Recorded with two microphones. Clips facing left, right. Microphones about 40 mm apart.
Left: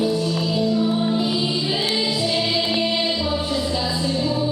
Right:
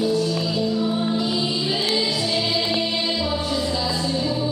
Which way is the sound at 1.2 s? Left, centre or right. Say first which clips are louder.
Left 1 dB; centre.